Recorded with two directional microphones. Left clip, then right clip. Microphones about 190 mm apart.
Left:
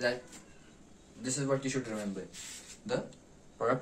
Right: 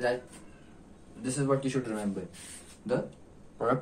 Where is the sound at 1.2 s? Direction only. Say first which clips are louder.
Right 3 dB; 20° left (ahead or behind).